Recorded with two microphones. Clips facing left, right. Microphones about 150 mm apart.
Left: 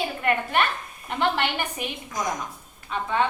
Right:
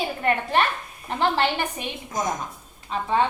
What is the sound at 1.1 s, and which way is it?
A woman's voice, 35° right (ahead or behind).